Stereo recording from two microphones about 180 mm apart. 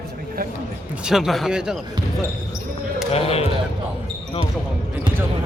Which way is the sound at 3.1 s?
35° left (ahead or behind).